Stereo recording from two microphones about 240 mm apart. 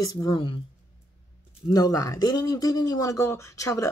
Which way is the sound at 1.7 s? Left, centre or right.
Centre.